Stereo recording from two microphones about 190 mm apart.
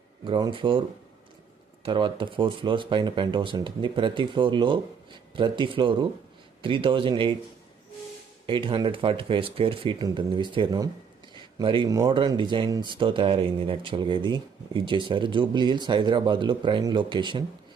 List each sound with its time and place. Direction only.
0.3 s speech: 25° right (ahead or behind)
8.4 s speech: 25° right (ahead or behind)